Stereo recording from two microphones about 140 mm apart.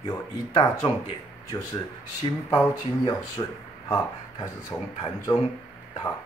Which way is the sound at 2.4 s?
25° left (ahead or behind).